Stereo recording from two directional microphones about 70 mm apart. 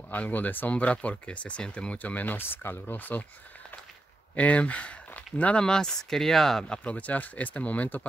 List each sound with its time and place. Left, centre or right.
0.1 s speech: left
4.4 s speech: centre
6.7 s speech: centre